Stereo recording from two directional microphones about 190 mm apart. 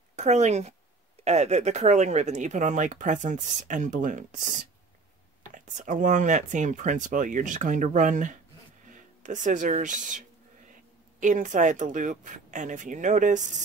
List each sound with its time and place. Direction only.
0.1 s speech: 35° right (ahead or behind)